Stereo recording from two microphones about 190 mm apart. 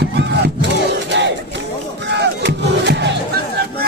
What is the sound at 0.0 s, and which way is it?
Battle cry, 60° right (ahead or behind).